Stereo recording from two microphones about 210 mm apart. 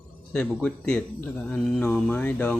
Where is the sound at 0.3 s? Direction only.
5° left (ahead or behind).